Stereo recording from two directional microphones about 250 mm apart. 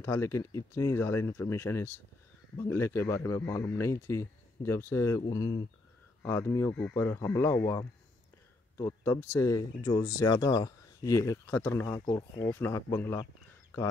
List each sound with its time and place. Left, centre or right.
0.0 s speech: centre